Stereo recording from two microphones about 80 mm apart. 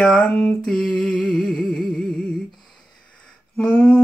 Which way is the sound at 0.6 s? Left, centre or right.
Centre.